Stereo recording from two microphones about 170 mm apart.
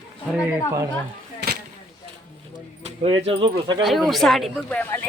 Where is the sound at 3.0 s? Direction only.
30° right (ahead or behind).